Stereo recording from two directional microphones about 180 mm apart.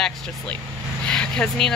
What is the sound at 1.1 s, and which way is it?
Vehicle, 5° left (ahead or behind).